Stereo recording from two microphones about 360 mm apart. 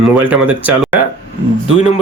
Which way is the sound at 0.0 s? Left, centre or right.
Centre.